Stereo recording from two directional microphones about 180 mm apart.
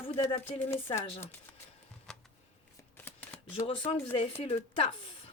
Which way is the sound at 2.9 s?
10° left (ahead or behind).